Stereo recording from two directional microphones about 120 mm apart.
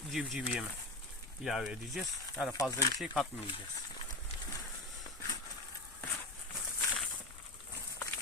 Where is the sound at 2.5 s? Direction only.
30° left (ahead or behind).